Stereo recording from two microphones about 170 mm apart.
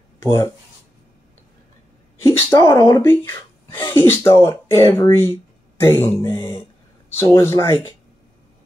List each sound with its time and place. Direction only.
0.2 s speech: 15° left (ahead or behind)
2.5 s speech: 25° left (ahead or behind)
3.0 s speech: 15° left (ahead or behind)